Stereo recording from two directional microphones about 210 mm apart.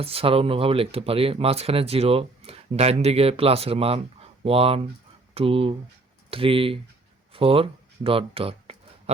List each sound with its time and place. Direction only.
0.0 s speech: 25° right (ahead or behind)